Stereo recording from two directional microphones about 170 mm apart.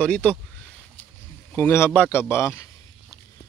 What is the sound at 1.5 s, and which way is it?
A man's voice, 10° left (ahead or behind).